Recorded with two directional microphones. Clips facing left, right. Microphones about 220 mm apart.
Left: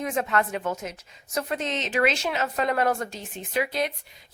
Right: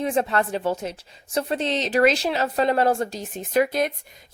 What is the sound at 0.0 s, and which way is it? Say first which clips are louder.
A woman's voice: right 3 dB; 30° right (ahead or behind).